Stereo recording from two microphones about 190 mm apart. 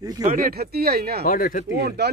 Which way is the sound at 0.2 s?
50° right (ahead or behind).